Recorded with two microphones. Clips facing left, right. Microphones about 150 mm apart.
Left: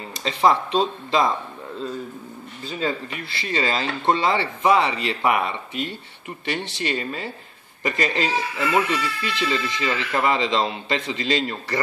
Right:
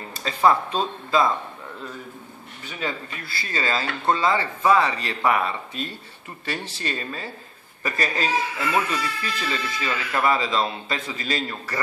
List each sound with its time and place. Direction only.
0.2 s speech: 15° left (ahead or behind)
2.8 s speech: 25° left (ahead or behind)
6.5 s speech: 70° left (ahead or behind)
7.0 s speech: 20° left (ahead or behind)